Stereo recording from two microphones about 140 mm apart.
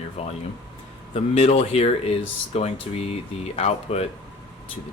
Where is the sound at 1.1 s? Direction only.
45° left (ahead or behind).